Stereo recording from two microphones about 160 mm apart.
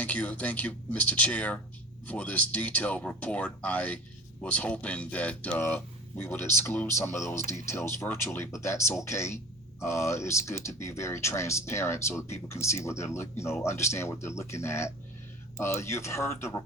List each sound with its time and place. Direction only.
0.0 s speech: 10° left (ahead or behind)